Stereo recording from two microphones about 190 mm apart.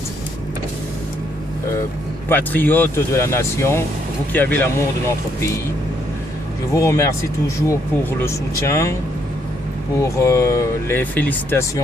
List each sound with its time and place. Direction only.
2.3 s speech: 10° left (ahead or behind)
6.7 s speech: 15° left (ahead or behind)
10.0 s speech: 15° left (ahead or behind)